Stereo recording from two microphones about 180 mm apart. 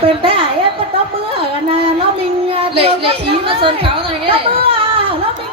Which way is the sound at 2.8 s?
30° right (ahead or behind).